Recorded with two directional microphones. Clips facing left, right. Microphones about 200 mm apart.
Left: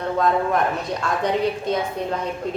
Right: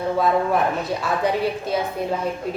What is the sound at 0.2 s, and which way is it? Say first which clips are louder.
A woman's voice: even; 5° right (ahead or behind).